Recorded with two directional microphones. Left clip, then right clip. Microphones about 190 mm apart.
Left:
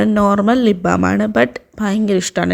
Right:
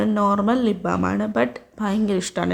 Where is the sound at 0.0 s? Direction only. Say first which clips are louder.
Left 6 dB; 35° left (ahead or behind).